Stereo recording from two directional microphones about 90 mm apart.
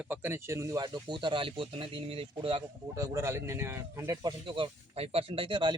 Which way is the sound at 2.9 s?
35° right (ahead or behind).